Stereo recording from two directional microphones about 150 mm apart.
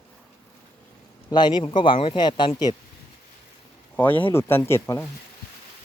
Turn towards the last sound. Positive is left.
turn(degrees=15)  # may be behind; listen again after turning